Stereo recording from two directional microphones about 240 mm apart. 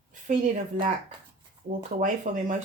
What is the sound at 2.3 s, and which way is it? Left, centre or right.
Speech, right.